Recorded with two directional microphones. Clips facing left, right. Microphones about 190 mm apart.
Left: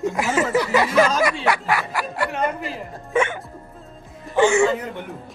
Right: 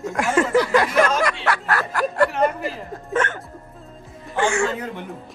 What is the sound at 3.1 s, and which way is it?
Music, 10° left (ahead or behind).